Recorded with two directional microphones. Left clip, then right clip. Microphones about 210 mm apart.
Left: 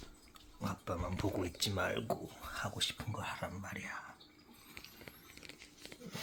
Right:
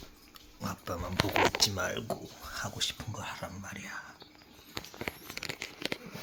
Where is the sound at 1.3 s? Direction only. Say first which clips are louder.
Right 13 dB; 10° left (ahead or behind).